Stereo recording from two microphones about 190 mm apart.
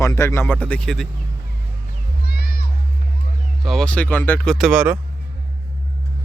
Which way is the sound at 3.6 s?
Centre (ahead or behind).